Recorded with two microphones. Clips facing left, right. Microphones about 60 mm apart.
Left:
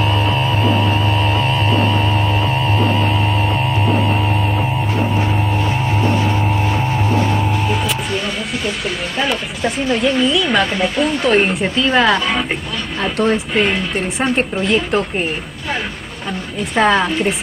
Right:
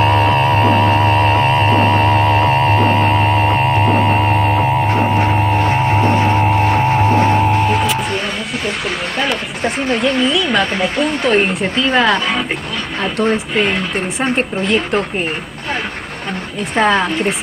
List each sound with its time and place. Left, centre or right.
0.0 s music: right
9.6 s speech: right
9.9 s speech: centre
16.5 s speech: centre